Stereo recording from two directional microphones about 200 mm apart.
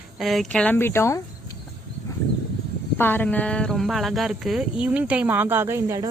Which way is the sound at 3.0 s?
10° left (ahead or behind).